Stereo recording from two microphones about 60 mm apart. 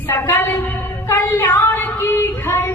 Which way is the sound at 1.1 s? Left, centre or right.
Left.